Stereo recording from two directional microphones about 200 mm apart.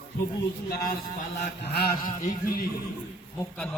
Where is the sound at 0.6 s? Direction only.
50° left (ahead or behind).